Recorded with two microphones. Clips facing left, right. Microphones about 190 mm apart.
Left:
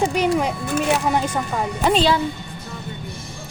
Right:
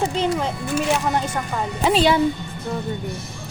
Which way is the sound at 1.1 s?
15° left (ahead or behind).